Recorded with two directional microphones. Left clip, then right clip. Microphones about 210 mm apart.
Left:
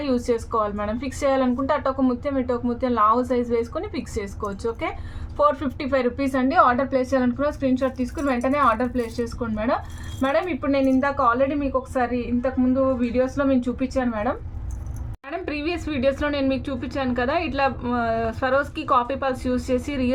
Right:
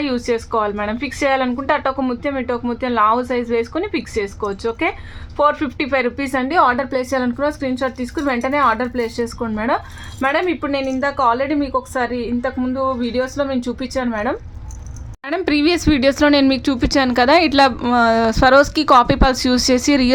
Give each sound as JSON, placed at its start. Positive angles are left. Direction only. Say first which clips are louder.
{"t": 0.0, "sound": "speech", "louder": "right 3 dB", "side_deg": -20}